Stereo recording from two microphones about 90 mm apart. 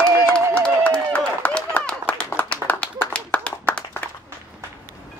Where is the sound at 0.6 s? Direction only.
15° left (ahead or behind).